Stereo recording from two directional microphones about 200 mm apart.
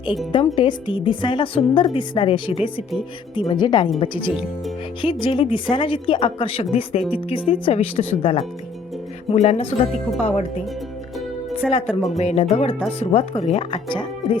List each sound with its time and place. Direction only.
0.3 s a woman's voice: 25° left (ahead or behind)
11.6 s speech: centre (ahead or behind)
12.1 s a woman's voice: 30° left (ahead or behind)